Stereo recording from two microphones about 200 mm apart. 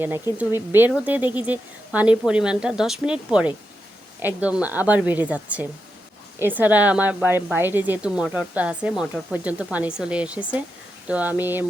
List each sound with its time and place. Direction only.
0.0 s speech: 10° right (ahead or behind)